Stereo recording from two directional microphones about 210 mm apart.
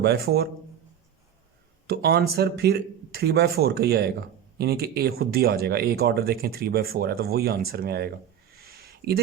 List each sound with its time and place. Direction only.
0.0 s speech: 50° right (ahead or behind)
1.9 s speech: 50° right (ahead or behind)
8.5 s a sound: 45° right (ahead or behind)